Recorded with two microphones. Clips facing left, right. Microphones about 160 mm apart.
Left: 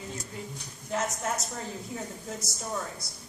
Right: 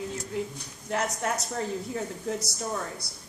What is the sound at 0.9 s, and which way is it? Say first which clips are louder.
Speech: right 2 dB; 65° right (ahead or behind).